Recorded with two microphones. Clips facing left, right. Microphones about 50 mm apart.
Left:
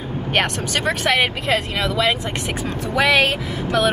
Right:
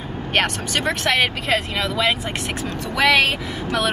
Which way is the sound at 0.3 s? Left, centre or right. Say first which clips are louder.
Even; centre.